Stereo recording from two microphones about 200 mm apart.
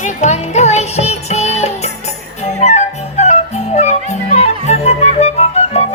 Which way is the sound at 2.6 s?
35° left (ahead or behind).